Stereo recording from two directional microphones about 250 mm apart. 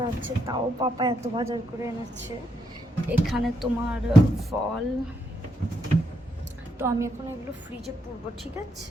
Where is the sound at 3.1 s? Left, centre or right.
Centre.